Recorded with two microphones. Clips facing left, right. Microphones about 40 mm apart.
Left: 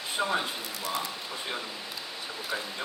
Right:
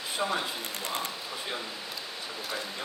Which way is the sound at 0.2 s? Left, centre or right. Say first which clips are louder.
Left 2 dB; centre.